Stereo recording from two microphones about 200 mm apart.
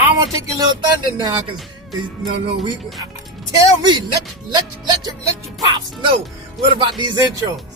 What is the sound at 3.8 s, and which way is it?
A man's voice, 20° right (ahead or behind).